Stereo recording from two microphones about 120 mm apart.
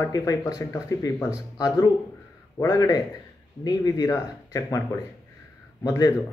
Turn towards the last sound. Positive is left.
turn(degrees=30)  # may be behind; listen again after turning